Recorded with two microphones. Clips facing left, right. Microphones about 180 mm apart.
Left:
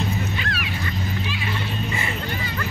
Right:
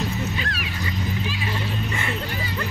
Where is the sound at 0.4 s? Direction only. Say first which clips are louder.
Left 1 dB; 35° right (ahead or behind).